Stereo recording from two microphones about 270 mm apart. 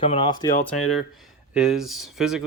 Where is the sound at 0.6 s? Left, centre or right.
Centre.